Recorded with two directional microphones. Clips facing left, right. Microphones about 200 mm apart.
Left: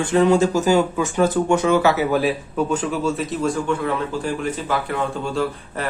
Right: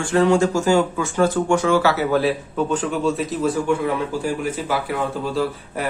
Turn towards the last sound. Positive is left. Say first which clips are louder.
# right 1 dB
turn(degrees=0)  # may be behind; listen again after turning